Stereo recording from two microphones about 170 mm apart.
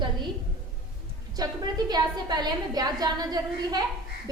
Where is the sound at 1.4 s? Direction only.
25° right (ahead or behind).